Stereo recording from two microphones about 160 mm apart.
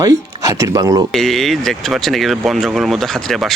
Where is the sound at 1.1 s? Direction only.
Centre (ahead or behind).